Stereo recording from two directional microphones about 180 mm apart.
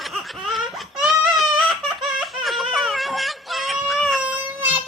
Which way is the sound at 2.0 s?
Centre (ahead or behind).